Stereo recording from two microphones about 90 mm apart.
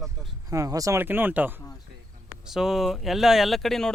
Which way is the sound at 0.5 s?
40° right (ahead or behind).